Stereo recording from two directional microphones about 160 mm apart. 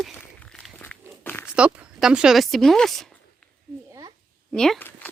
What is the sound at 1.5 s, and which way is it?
Speech, 5° right (ahead or behind).